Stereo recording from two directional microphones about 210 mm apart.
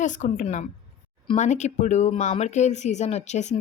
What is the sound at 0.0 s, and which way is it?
Speech, 35° left (ahead or behind).